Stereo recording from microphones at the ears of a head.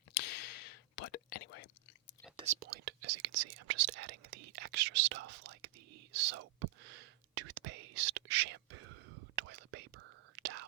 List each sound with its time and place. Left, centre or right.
0.1 s whispering: left
2.3 s whispering: right